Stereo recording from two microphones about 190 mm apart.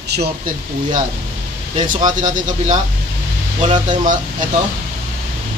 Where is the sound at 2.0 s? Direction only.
20° right (ahead or behind).